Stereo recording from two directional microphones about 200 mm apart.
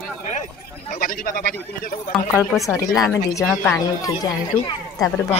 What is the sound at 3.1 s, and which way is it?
Speech, 10° left (ahead or behind).